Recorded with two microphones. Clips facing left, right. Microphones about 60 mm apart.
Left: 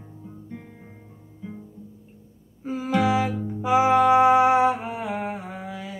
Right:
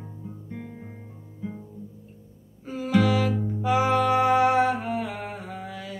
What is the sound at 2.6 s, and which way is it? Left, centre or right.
Music, centre.